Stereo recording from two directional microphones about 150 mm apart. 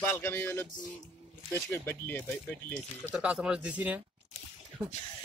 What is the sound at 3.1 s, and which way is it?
Speech, 5° right (ahead or behind).